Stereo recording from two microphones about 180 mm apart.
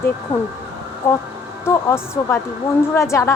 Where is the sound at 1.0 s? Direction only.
10° left (ahead or behind).